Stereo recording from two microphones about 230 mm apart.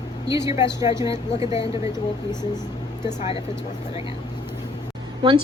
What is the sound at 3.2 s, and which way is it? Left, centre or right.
Speech, left.